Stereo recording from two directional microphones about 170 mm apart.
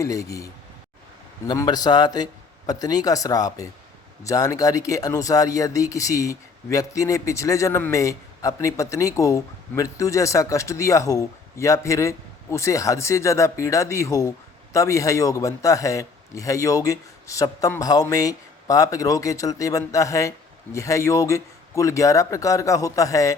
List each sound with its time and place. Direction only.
0.0 s speech: 20° left (ahead or behind)